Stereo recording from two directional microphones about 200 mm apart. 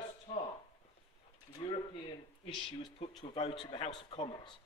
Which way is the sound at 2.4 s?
25° left (ahead or behind).